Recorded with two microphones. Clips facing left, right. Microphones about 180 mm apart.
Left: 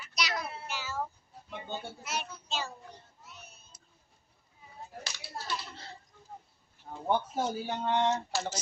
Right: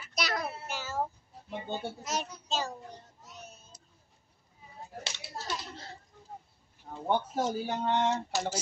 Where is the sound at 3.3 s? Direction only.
40° right (ahead or behind).